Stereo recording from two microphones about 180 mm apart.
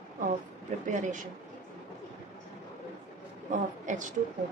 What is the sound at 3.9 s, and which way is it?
Speech, 45° right (ahead or behind).